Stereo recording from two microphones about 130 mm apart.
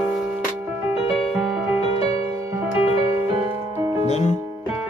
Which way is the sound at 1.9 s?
50° left (ahead or behind).